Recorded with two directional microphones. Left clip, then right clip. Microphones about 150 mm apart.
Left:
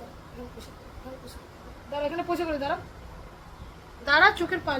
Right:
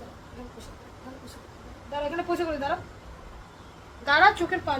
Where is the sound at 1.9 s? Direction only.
30° left (ahead or behind).